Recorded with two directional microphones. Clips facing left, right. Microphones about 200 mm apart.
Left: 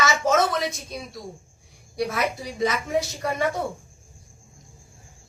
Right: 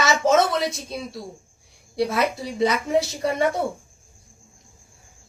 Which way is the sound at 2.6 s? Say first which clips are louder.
Right 3 dB; 30° right (ahead or behind).